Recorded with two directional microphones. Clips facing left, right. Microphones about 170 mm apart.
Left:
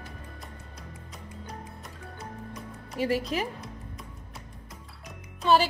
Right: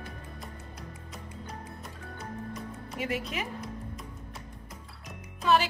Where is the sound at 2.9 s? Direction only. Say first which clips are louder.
Left 6 dB; 35° left (ahead or behind).